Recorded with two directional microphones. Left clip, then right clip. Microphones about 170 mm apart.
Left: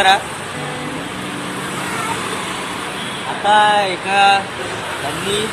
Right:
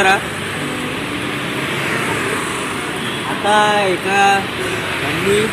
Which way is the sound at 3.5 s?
10° right (ahead or behind).